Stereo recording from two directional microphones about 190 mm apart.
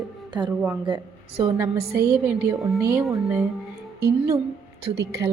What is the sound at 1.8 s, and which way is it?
Speech, 55° right (ahead or behind).